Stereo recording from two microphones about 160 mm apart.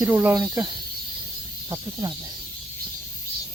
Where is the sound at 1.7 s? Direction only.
25° right (ahead or behind).